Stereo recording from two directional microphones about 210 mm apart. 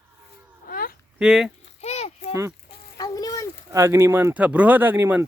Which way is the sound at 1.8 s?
30° left (ahead or behind).